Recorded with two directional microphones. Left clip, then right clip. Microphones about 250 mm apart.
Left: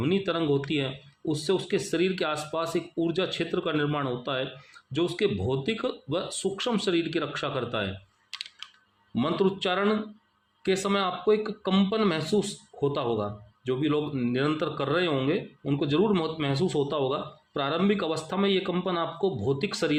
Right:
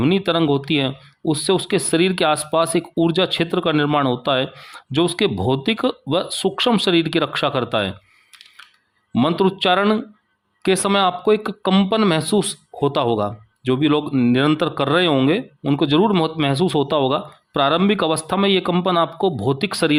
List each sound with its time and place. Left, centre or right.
0.0 s speech: right
9.1 s speech: right